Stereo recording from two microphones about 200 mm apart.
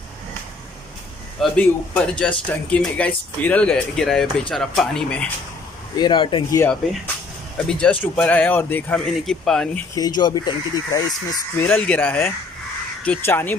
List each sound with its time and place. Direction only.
1.4 s speech: 5° left (ahead or behind)
5.9 s speech: 25° left (ahead or behind)
6.6 s speech: 5° left (ahead or behind)
9.9 s speech: 20° left (ahead or behind)
11.6 s speech: 5° left (ahead or behind)